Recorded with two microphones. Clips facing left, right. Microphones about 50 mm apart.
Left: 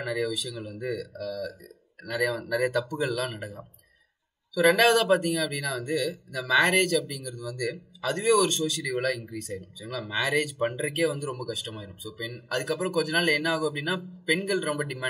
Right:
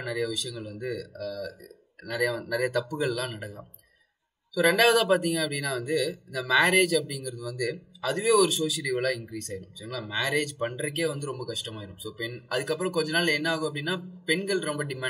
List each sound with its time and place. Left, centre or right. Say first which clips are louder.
0.0 s speech: left 1 dB; centre